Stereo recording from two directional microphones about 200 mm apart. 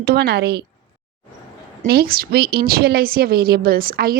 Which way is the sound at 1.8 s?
50° right (ahead or behind).